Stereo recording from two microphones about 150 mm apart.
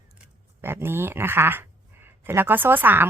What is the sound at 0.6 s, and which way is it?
Speech, 15° right (ahead or behind).